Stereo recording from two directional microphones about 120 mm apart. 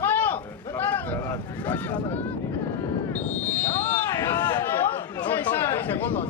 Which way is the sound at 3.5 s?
20° left (ahead or behind).